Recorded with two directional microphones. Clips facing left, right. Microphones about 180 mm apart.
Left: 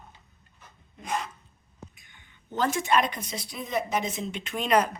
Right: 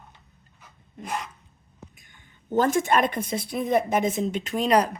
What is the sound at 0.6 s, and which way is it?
Rub, 10° right (ahead or behind).